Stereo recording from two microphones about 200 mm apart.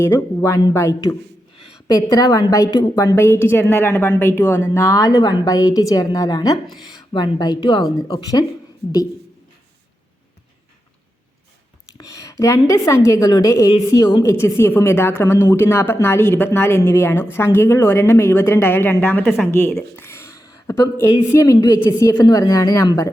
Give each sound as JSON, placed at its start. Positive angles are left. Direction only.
{"t": 0.0, "sound": "a woman's voice", "side_deg": 15}
{"t": 11.9, "sound": "a sound", "side_deg": 15}
{"t": 12.6, "sound": "a woman's voice", "side_deg": 15}